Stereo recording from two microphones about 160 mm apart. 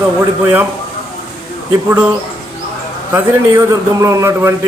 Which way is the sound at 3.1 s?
20° right (ahead or behind).